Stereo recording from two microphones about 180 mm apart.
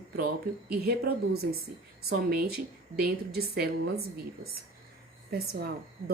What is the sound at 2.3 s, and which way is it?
A woman's voice, 55° right (ahead or behind).